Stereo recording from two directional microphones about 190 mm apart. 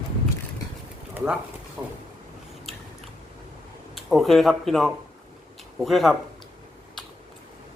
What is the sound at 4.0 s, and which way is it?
Speech, centre (ahead or behind).